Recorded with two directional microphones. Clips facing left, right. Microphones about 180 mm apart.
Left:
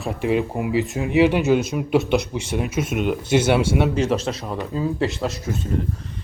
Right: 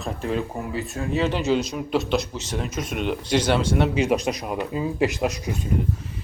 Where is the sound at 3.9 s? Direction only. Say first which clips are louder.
Even; 10° right (ahead or behind).